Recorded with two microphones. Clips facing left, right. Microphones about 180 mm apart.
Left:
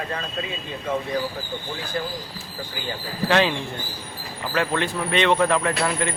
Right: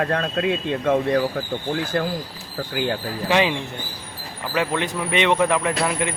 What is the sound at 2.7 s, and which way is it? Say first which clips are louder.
Speech: right 9 dB; 70° right (ahead or behind).